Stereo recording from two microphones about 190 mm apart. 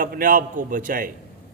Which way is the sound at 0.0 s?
45° right (ahead or behind).